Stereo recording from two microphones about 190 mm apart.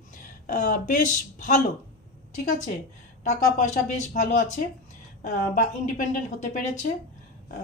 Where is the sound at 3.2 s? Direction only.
40° left (ahead or behind).